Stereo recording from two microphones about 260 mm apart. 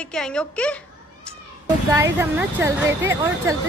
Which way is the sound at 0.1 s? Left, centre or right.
Centre.